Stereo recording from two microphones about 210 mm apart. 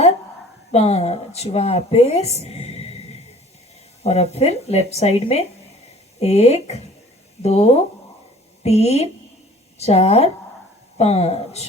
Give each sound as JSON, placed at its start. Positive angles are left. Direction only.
{"t": 0.7, "sound": "a woman's voice", "side_deg": 30}
{"t": 4.0, "sound": "a woman's voice", "side_deg": 30}